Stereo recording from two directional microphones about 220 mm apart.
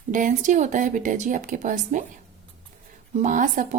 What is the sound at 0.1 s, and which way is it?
A woman's voice, 35° right (ahead or behind).